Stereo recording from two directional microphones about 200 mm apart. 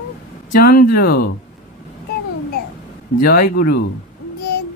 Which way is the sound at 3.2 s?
50° left (ahead or behind).